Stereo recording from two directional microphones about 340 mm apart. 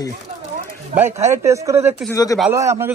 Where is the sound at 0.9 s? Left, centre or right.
Centre.